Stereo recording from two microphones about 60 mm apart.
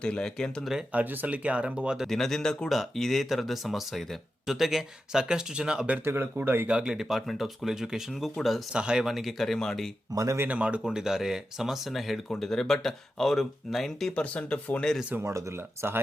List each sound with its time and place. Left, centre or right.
0.0 s speech: centre
0.6 s speech: centre
0.9 s speech: right
2.0 s speech: centre
6.1 s speech: right
6.7 s speech: centre
8.7 s speech: centre
10.1 s speech: right
10.5 s speech: right; by 14.1 s centre
14.2 s speech: centre
15.2 s speech: right